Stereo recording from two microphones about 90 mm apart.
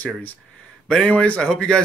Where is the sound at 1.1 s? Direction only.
10° left (ahead or behind).